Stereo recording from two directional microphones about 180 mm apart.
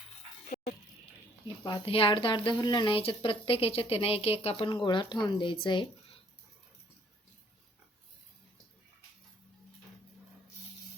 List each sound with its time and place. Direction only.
1.6 s speech: 30° left (ahead or behind)